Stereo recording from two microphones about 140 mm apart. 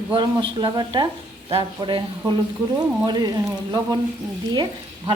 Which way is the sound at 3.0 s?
30° right (ahead or behind).